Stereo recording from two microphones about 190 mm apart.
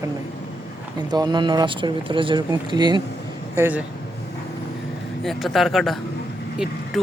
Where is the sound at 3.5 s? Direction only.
10° right (ahead or behind).